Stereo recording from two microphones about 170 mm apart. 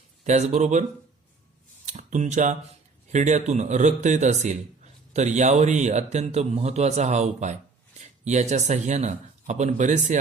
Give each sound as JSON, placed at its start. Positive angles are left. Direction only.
{"t": 0.3, "sound": "speech", "side_deg": -45}
{"t": 1.9, "sound": "speech", "side_deg": -45}